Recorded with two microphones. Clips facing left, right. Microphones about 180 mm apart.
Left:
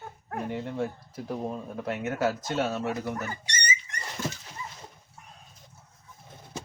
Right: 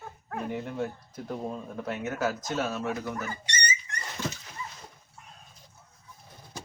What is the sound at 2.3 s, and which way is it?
Speech, 30° left (ahead or behind).